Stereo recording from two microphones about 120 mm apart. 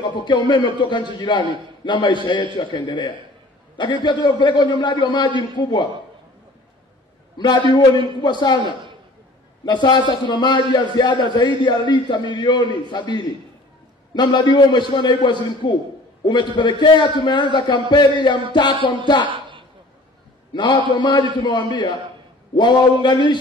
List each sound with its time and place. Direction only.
0.0 s a man's voice: 40° left (ahead or behind)
7.3 s a man's voice: 40° left (ahead or behind)
19.2 s a sound: 45° right (ahead or behind)
20.5 s a man's voice: 40° left (ahead or behind)
23.0 s a man's voice: 40° left (ahead or behind)